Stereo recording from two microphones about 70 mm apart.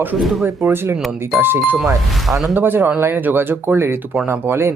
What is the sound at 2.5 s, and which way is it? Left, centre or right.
Speech, right.